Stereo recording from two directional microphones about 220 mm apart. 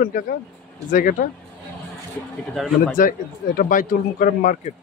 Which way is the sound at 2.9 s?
40° left (ahead or behind).